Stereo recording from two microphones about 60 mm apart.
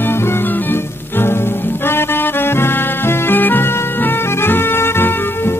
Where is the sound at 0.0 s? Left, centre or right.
Left.